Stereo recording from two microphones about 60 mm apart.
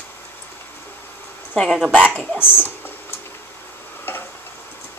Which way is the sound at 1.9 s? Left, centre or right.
Left.